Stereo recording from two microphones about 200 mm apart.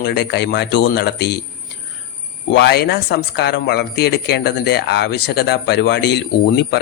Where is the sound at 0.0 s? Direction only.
55° left (ahead or behind).